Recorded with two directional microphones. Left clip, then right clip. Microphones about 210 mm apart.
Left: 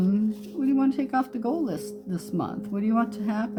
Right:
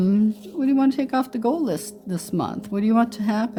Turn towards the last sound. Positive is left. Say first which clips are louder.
# right 5 dB
turn(degrees=-45)  # may be behind; listen again after turning